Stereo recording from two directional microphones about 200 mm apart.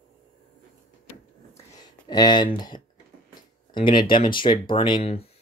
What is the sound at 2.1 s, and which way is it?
Speech, 20° left (ahead or behind).